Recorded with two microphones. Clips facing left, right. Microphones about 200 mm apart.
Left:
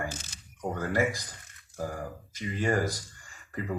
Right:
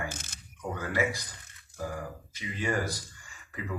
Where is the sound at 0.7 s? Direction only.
45° left (ahead or behind).